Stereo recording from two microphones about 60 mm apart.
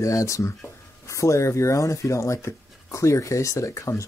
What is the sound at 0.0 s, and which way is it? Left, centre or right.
Speech, left.